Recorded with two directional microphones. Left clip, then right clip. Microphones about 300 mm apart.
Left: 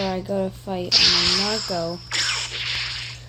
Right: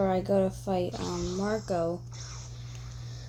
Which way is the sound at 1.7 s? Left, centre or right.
Centre.